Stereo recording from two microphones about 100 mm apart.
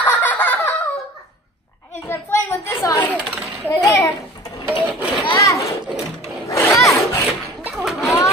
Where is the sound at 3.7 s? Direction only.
35° left (ahead or behind).